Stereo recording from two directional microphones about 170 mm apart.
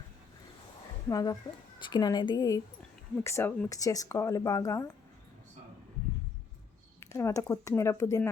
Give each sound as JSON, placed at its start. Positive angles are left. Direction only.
{"t": 1.0, "sound": "speech", "side_deg": 20}
{"t": 7.0, "sound": "speech", "side_deg": 15}